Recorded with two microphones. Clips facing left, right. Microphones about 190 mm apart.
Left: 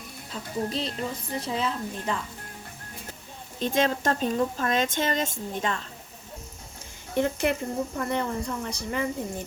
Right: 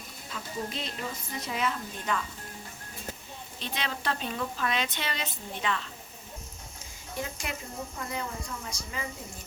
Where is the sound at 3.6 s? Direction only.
45° left (ahead or behind).